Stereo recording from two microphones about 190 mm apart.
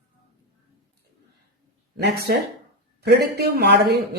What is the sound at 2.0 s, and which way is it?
Speech, 55° right (ahead or behind).